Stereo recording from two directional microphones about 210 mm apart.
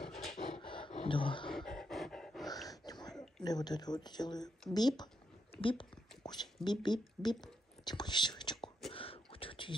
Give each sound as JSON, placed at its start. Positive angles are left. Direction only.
{"t": 0.0, "sound": "rub", "side_deg": 0}
{"t": 0.6, "sound": "roaring cats", "side_deg": 25}
{"t": 1.5, "sound": "dog", "side_deg": 0}
{"t": 2.4, "sound": "a sound", "side_deg": 15}
{"t": 3.4, "sound": "speech", "side_deg": 20}
{"t": 8.9, "sound": "whispering", "side_deg": 25}